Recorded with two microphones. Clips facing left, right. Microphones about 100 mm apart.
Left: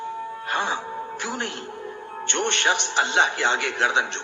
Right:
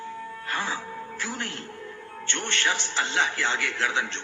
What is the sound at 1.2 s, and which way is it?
A man's voice, 20° left (ahead or behind).